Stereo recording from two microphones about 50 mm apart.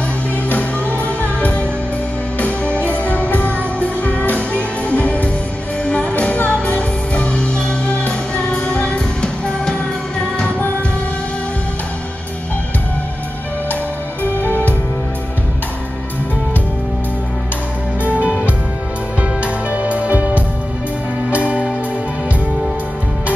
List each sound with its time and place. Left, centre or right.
1.0 s music: left; by 9.8 s centre
14.2 s music: left
18.0 s music: right
19.4 s music: right